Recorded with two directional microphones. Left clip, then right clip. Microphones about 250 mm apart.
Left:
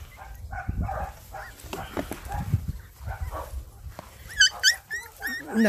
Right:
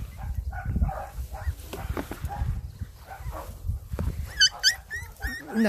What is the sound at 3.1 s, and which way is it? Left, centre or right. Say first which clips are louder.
Dog: left 2 dB; left.